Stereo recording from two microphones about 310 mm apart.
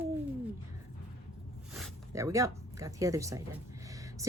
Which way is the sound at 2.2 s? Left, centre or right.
Centre.